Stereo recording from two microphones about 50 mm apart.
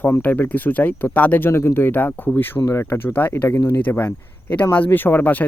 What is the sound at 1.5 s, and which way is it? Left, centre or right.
Speech, left.